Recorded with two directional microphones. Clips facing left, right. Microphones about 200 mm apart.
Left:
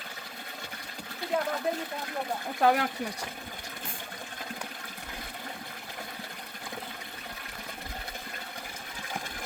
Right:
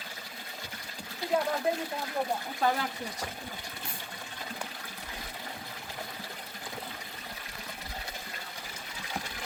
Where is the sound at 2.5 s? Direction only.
60° left (ahead or behind).